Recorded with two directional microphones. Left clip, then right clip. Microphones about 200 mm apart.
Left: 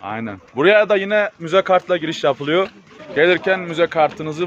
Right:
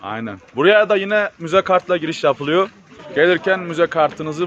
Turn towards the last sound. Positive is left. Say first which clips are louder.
# even
turn(degrees=0)  # may be behind; listen again after turning